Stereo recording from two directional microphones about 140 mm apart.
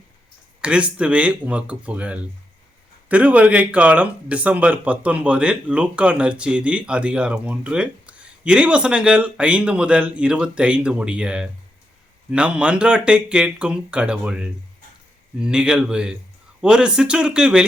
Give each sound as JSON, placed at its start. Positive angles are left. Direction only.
{"t": 0.6, "sound": "speech", "side_deg": -10}